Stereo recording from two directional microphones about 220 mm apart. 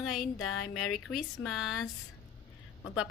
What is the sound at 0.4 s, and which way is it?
Speech, 70° left (ahead or behind).